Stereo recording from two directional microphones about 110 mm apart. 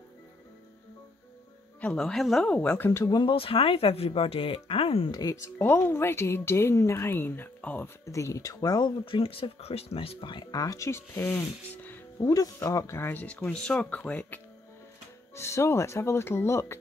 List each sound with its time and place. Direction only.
1.8 s speech: 10° left (ahead or behind)
2.9 s speech: 25° left (ahead or behind)
3.2 s speech: 50° left (ahead or behind)
5.1 s speech: 30° left (ahead or behind)
8.0 s speech: 30° left (ahead or behind)
9.0 s speech: 55° left (ahead or behind)
10.6 s speech: 30° left (ahead or behind)
12.3 s speech: 30° left (ahead or behind); by 14.4 s 10° left (ahead or behind)
15.3 s speech: 25° left (ahead or behind)